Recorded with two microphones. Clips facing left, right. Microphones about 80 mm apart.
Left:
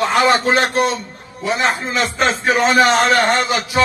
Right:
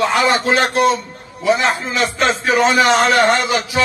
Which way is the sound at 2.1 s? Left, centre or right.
Left.